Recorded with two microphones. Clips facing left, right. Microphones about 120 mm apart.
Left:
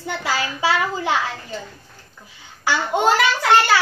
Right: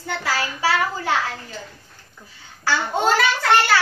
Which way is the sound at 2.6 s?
15° left (ahead or behind).